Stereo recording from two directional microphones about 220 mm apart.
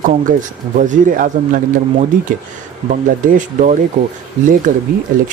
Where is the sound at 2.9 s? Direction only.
35° right (ahead or behind).